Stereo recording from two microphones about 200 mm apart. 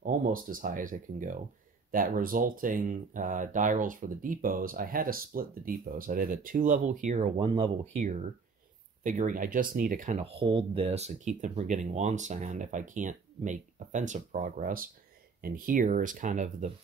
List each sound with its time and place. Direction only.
0.0 s speech: 45° right (ahead or behind)
10.4 s speech: 25° right (ahead or behind)